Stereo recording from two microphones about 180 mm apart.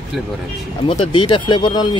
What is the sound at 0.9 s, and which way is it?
Speech, 30° left (ahead or behind).